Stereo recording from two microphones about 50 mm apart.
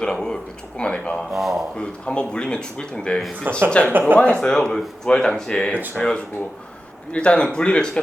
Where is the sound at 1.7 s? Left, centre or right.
Centre.